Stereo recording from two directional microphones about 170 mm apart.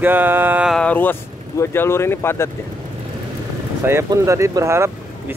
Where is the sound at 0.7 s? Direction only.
10° left (ahead or behind).